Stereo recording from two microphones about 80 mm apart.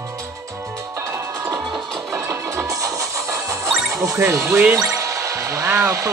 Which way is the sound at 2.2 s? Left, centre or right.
Right.